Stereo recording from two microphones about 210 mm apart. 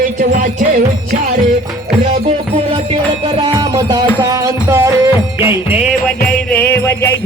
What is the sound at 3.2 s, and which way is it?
Music, 25° right (ahead or behind).